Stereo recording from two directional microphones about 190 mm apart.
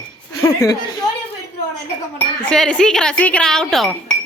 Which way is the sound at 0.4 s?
15° left (ahead or behind).